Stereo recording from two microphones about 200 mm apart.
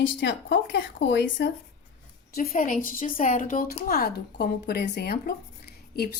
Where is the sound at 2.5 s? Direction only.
40° left (ahead or behind).